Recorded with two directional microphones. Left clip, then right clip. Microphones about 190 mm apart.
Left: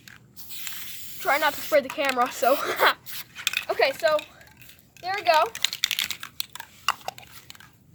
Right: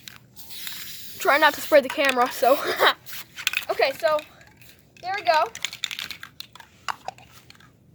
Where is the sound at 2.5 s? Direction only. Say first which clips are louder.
Right 1 dB; 20° right (ahead or behind).